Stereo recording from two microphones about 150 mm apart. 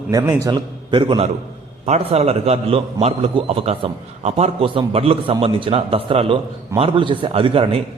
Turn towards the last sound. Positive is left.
turn(degrees=-35)  # may be behind; listen again after turning